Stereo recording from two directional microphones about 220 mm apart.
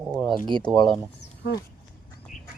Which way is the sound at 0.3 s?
20° right (ahead or behind).